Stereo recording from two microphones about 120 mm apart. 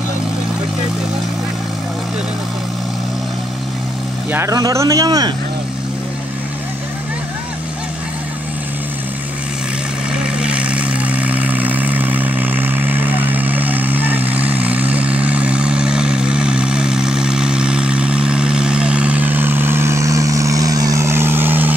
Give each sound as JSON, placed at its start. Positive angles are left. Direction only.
{"t": 4.3, "sound": "speech", "side_deg": -25}
{"t": 10.1, "sound": "vehicle", "side_deg": -10}